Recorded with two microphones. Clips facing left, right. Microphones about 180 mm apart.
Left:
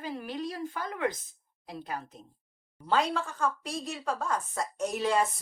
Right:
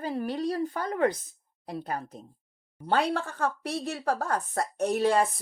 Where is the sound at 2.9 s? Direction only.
60° right (ahead or behind).